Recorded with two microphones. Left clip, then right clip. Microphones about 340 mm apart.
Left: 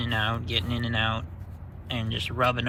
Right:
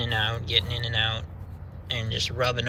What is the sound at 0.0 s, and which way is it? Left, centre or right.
Speech, centre.